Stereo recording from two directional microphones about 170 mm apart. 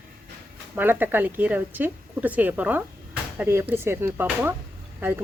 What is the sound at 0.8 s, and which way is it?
Speech, 10° right (ahead or behind).